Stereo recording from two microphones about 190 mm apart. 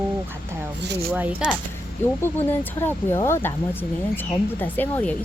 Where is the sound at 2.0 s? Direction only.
10° left (ahead or behind).